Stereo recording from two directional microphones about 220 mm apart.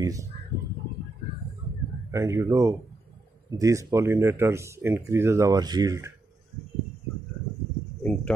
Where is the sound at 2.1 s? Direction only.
15° right (ahead or behind).